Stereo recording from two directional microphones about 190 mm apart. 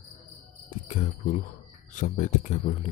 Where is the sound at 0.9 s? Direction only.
40° left (ahead or behind).